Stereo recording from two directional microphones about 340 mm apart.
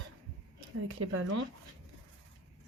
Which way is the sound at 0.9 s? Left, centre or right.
Right.